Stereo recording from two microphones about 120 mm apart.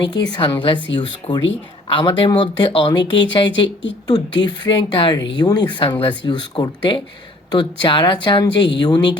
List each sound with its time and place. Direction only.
0.1 s speech: 35° left (ahead or behind)